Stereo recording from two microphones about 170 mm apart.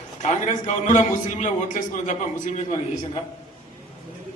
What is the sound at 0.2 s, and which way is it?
A man's voice, 45° left (ahead or behind).